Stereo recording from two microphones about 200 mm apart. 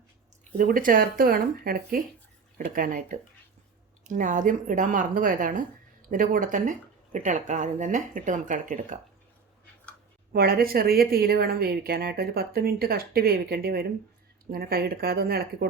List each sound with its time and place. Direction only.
0.5 s a woman's voice: 45° right (ahead or behind)
10.3 s a woman's voice: 50° right (ahead or behind)